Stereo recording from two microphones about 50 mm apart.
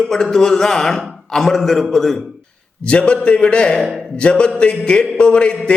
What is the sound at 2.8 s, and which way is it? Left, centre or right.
A man's voice, left.